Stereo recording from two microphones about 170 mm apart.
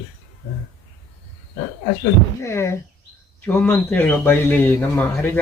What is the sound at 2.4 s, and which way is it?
Speech, 15° left (ahead or behind).